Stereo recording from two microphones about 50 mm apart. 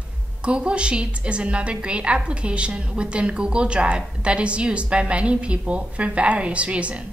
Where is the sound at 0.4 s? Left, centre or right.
Right.